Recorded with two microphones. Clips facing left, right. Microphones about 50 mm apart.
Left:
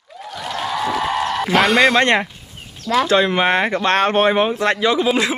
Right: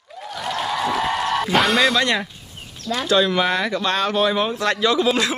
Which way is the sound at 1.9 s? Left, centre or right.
Left.